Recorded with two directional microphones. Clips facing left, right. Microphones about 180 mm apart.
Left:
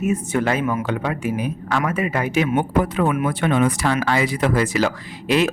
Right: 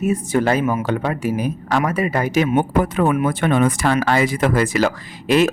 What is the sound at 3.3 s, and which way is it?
Speech, 50° right (ahead or behind).